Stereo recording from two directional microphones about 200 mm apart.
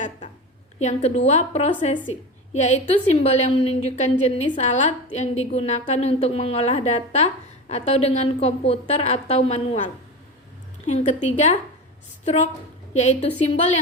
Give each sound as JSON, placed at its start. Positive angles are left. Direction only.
{"t": 0.8, "sound": "a woman's voice", "side_deg": 35}
{"t": 10.8, "sound": "a woman's voice", "side_deg": 35}